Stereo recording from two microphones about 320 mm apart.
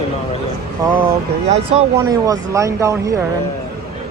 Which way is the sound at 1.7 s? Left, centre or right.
Centre.